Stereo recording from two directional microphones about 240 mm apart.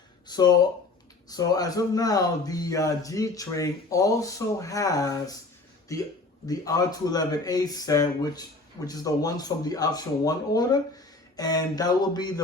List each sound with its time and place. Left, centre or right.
0.3 s speech: centre